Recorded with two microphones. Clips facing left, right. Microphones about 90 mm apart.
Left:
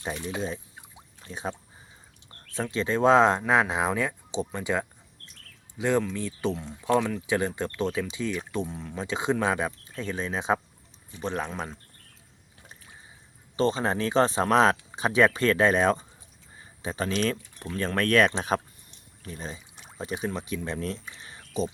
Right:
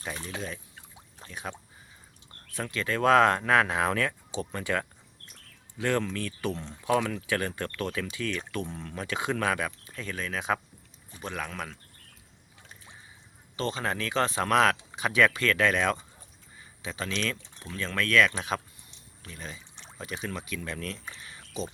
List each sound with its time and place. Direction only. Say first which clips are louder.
0.3 s speech: left 5 dB; 25° left (ahead or behind)
8.5 s speech: left 3 dB; 10° left (ahead or behind)
9.0 s speech: left 3 dB; 25° left (ahead or behind)
13.6 s speech: left 6 dB; 30° left (ahead or behind)
16.6 s a sound: left 5 dB; 35° left (ahead or behind)
17.7 s speech: left 2 dB; 40° left (ahead or behind)
18.4 s a sound: left 5 dB; 40° left (ahead or behind)
19.6 s pour: left 1 dB; 5° left (ahead or behind)
20.2 s speech: left 4 dB; 30° left (ahead or behind)
21.2 s a sound: left 5 dB; 35° left (ahead or behind)